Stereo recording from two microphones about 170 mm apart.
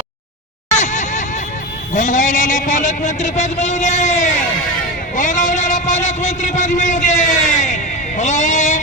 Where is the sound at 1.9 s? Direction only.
50° left (ahead or behind).